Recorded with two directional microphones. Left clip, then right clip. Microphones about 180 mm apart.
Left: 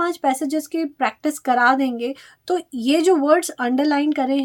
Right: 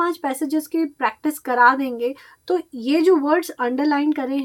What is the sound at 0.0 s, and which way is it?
A woman's voice, 40° left (ahead or behind).